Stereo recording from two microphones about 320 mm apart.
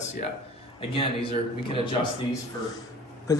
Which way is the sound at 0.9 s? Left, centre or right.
Centre.